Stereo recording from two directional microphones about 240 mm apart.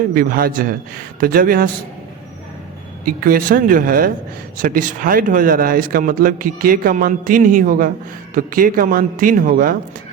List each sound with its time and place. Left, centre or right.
0.1 s speech: right
3.0 s speech: right